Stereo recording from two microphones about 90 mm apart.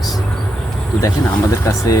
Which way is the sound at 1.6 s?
35° left (ahead or behind).